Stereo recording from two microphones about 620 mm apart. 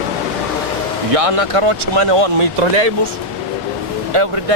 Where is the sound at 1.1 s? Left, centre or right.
Right.